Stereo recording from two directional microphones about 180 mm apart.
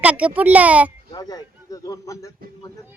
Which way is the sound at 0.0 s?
5° right (ahead or behind).